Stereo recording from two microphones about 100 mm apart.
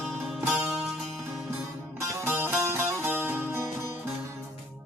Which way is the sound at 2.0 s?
25° right (ahead or behind).